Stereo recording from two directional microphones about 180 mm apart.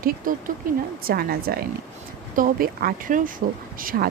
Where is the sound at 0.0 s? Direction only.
50° right (ahead or behind).